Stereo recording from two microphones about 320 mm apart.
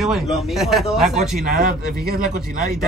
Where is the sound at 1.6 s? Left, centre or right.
Right.